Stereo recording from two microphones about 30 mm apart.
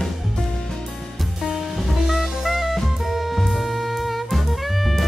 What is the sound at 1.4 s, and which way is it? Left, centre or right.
Music, centre.